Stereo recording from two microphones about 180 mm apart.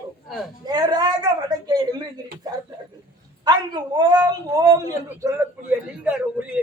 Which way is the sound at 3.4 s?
25° right (ahead or behind).